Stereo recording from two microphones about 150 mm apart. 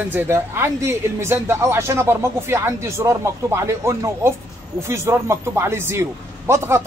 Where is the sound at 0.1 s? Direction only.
15° right (ahead or behind).